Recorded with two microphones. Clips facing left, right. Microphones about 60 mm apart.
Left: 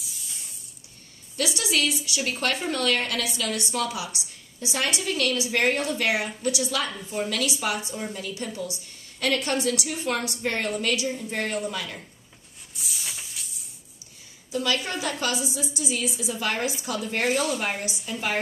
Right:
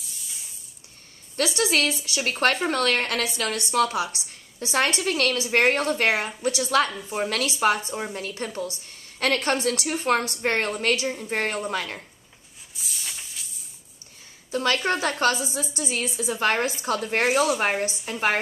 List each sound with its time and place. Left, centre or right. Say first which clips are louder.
0.0 s spray: even; centre
1.3 s a woman's voice: right 3 dB; right
12.7 s a sound: even; centre
14.5 s a woman's voice: right 3 dB; right